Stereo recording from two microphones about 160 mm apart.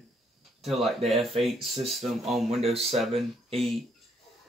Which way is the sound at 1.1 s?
Centre (ahead or behind).